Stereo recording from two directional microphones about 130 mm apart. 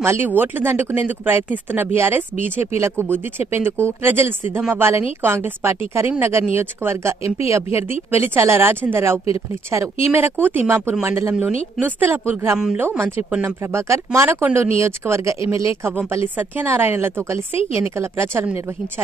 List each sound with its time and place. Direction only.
0.0 s speech: 15° right (ahead or behind)
12.5 s speech: 5° right (ahead or behind)
12.8 s speech: 15° right (ahead or behind)